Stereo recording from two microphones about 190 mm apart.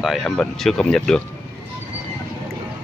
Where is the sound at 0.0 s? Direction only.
Centre (ahead or behind).